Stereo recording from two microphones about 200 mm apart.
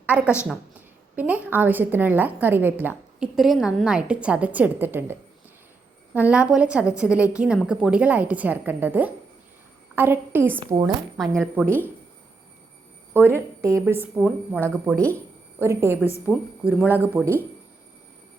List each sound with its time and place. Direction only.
0.0 s a woman's voice: 5° right (ahead or behind)
6.1 s a woman's voice: 5° right (ahead or behind)
10.6 s speech: 20° right (ahead or behind)
11.6 s speech: 10° left (ahead or behind)
13.1 s a woman's voice: 10° right (ahead or behind)